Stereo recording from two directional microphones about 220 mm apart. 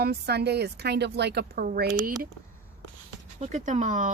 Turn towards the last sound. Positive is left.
turn(degrees=-35)  # may be behind; listen again after turning